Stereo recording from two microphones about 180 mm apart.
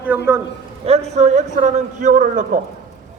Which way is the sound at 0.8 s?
35° right (ahead or behind).